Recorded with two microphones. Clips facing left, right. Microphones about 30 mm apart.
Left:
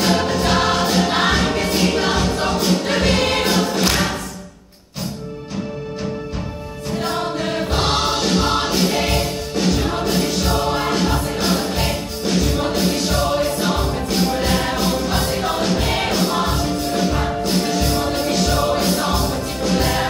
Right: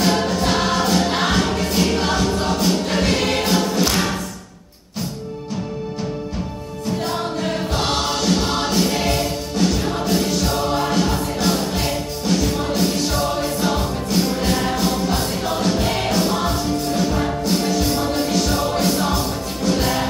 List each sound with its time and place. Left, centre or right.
0.0 s music: centre
7.0 s choir: centre
12.7 s music: centre
15.1 s music: left
18.3 s music: left